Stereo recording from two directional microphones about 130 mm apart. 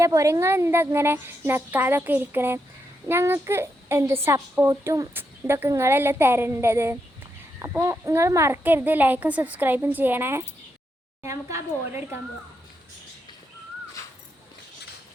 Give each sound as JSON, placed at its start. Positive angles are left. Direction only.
{"t": 0.0, "sound": "a woman's voice", "side_deg": -25}